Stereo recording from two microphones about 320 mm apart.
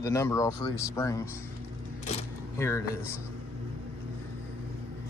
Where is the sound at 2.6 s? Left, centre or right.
Centre.